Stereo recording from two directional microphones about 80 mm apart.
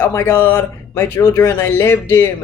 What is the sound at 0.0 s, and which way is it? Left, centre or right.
A woman's voice, left.